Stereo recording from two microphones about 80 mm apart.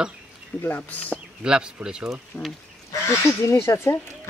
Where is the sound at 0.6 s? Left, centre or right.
Left.